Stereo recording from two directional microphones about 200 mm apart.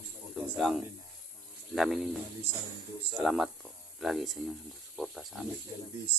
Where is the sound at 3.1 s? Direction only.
Centre (ahead or behind).